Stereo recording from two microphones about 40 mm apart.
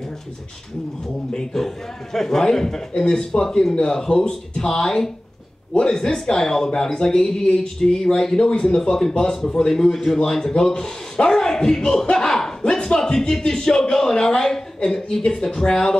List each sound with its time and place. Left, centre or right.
1.3 s a man's voice: centre
12.6 s a sound: centre
13.4 s a man's voice: centre